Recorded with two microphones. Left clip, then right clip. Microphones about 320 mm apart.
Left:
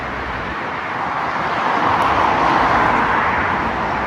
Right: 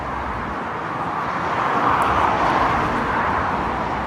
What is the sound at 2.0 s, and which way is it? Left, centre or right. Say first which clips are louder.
Vehicle: left 3 dB; left.